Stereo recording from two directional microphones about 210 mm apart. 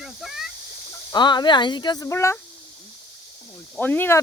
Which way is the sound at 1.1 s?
20° left (ahead or behind).